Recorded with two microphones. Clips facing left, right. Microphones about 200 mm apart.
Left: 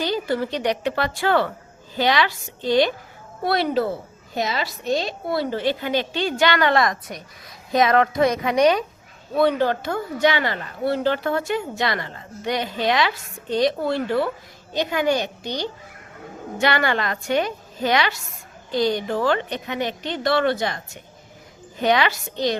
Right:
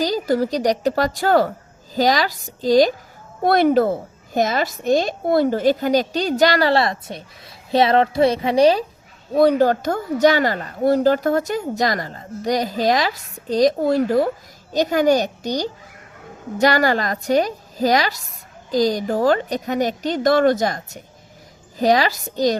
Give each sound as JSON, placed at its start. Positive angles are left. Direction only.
{"t": 0.0, "sound": "speech", "side_deg": -40}
{"t": 3.4, "sound": "speech", "side_deg": -50}